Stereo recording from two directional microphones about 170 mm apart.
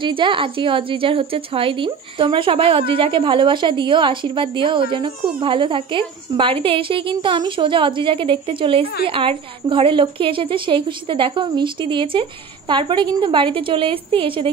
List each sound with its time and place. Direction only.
0.0 s a woman's voice: 30° right (ahead or behind)